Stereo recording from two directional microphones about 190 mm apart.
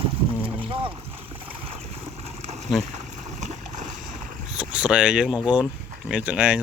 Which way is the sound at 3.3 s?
40° right (ahead or behind).